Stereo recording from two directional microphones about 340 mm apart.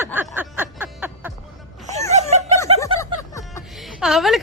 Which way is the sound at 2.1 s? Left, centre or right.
Centre.